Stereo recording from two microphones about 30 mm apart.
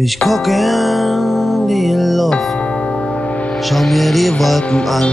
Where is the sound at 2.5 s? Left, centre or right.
Left.